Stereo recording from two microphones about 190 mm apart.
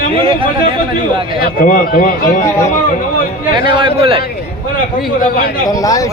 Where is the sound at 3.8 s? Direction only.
30° right (ahead or behind).